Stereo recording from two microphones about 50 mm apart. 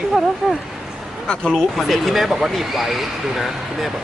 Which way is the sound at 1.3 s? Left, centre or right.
Centre.